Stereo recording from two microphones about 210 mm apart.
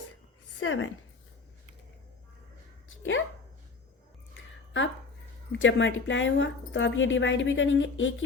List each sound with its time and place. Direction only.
0.6 s a woman's voice: 70° left (ahead or behind)
3.0 s speech: 70° left (ahead or behind)
5.5 s a woman's voice: 60° left (ahead or behind)